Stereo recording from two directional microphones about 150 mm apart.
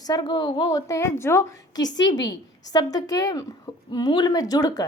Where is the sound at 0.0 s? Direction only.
30° left (ahead or behind).